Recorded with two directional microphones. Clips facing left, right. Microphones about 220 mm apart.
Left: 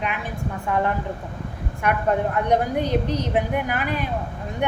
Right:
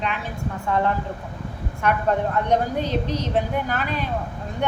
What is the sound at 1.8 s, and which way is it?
A woman's voice, 10° left (ahead or behind).